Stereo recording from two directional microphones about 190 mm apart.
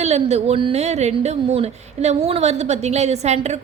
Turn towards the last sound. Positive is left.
turn(degrees=-35)  # may be behind; listen again after turning